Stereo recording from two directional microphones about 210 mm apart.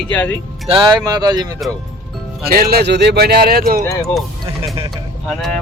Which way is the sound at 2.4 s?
45° right (ahead or behind).